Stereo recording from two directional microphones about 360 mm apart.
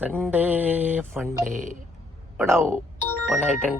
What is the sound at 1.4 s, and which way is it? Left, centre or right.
Speech, right.